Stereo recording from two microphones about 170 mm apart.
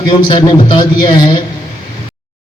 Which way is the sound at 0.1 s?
25° left (ahead or behind).